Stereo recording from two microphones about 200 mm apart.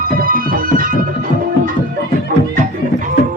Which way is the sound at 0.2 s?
45° right (ahead or behind).